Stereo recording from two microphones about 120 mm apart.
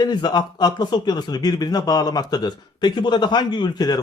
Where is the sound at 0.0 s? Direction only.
35° left (ahead or behind).